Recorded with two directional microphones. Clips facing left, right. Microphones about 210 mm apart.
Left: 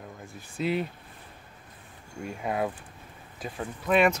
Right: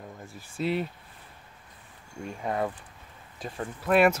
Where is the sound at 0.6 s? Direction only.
Centre (ahead or behind).